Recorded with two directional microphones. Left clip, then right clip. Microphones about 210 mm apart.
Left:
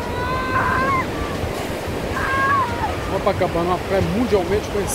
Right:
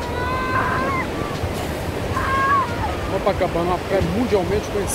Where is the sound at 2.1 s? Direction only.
50° left (ahead or behind).